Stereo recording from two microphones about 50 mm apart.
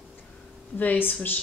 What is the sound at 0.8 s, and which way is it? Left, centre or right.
Speech, left.